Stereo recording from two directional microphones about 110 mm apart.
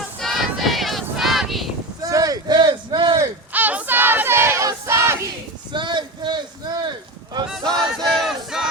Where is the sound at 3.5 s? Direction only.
15° right (ahead or behind).